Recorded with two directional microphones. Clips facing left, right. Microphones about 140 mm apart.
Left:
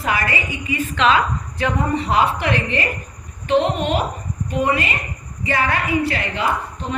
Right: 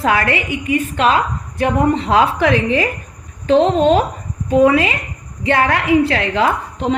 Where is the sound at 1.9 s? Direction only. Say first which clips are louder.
Right 4 dB; 90° right.